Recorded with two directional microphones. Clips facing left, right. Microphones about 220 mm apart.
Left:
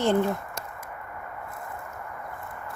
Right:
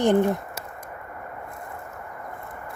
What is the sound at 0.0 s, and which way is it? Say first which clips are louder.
Speech: right 4 dB; 15° right (ahead or behind).